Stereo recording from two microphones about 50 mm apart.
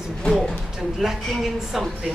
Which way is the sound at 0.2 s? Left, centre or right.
Centre.